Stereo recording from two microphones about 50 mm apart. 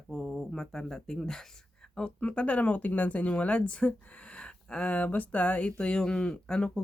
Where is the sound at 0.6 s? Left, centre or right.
Centre.